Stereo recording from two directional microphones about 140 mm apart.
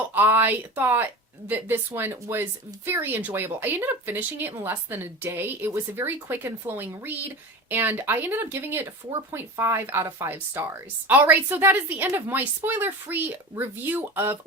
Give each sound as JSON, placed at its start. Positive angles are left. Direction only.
{"t": 0.1, "sound": "speech", "side_deg": -15}